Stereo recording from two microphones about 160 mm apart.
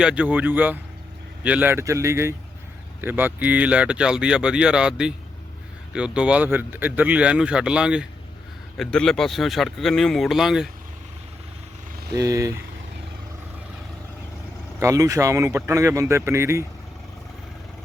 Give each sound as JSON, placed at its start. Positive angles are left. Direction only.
{"t": 0.0, "sound": "speech", "side_deg": -5}
{"t": 12.1, "sound": "speech", "side_deg": -20}
{"t": 14.8, "sound": "speech", "side_deg": -20}